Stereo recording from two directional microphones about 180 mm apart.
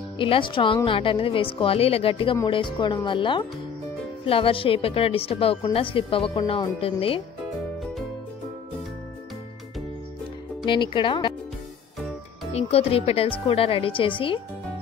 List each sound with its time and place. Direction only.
0.2 s a woman's voice: 30° left (ahead or behind)
10.6 s speech: 25° left (ahead or behind)
12.5 s a woman's voice: 35° left (ahead or behind)